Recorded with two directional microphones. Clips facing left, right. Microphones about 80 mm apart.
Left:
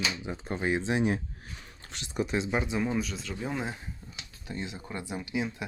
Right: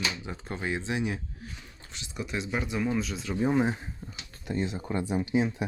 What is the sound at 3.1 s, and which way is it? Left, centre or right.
Speech, centre.